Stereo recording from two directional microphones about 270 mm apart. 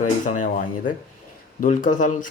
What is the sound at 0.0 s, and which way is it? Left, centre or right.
Speech, left.